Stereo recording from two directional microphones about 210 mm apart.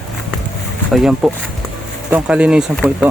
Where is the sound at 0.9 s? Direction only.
Centre (ahead or behind).